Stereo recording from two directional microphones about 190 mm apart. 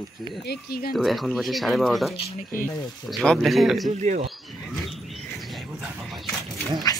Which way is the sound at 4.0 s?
40° right (ahead or behind).